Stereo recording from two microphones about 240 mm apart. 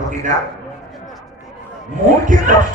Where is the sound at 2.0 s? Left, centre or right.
Right.